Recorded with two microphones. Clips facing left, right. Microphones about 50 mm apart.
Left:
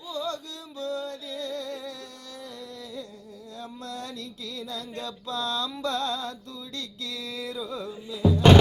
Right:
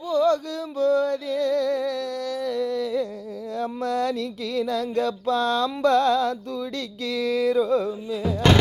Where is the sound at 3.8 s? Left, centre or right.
Right.